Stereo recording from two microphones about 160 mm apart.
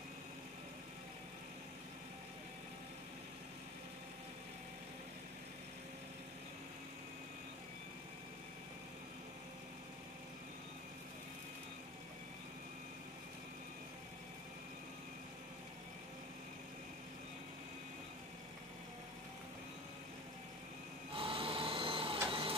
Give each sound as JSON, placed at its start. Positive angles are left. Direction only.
{"t": 21.1, "sound": "printer", "side_deg": -35}